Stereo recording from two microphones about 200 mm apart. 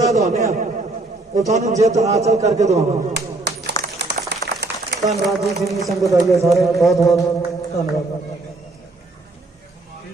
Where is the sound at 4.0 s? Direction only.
55° right (ahead or behind).